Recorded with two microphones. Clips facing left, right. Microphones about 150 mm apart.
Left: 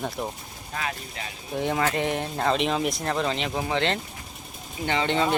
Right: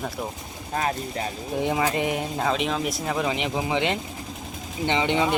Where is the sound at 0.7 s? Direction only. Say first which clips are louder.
Right 6 dB; 35° right (ahead or behind).